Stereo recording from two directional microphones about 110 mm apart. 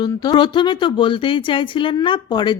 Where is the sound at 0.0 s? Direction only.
40° left (ahead or behind).